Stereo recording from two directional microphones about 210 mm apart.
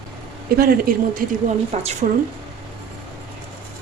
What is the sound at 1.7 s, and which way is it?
Speech, 30° right (ahead or behind).